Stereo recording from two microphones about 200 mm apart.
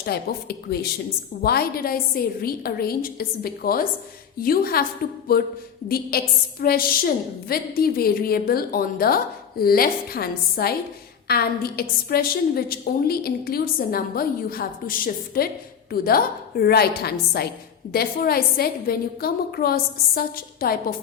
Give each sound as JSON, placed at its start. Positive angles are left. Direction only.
{"t": 0.0, "sound": "a woman's voice", "side_deg": 50}
{"t": 5.9, "sound": "a woman's voice", "side_deg": 50}